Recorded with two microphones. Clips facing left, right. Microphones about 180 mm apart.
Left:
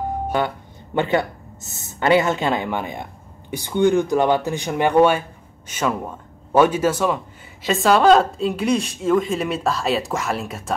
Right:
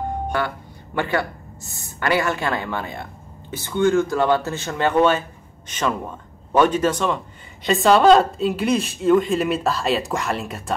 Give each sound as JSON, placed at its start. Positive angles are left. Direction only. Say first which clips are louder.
{"t": 0.9, "sound": "a man's voice", "louder": "left 3 dB", "side_deg": 20}